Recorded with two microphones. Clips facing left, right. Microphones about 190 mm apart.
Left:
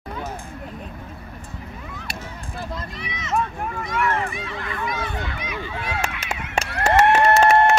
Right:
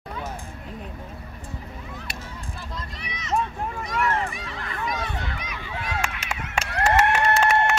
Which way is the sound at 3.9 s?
40° right (ahead or behind).